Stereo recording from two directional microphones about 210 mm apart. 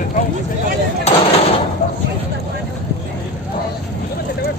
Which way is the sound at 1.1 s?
30° left (ahead or behind).